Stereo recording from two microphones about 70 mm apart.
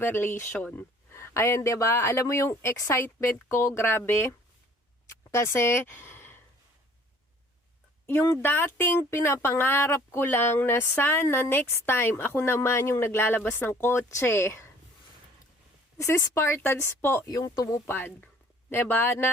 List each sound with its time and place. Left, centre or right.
0.0 s a woman's voice: left
8.0 s speech: left
16.0 s a woman's voice: left
17.2 s speech: left
17.7 s speech: left